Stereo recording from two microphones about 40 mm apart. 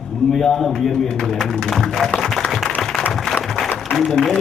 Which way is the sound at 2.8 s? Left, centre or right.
Centre.